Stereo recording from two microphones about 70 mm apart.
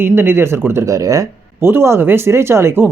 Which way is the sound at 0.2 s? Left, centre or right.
Right.